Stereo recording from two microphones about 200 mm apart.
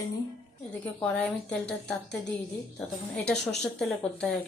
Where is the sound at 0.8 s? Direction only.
5° left (ahead or behind).